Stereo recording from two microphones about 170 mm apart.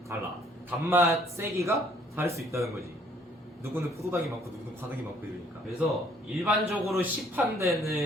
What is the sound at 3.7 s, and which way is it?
Speech, 15° right (ahead or behind).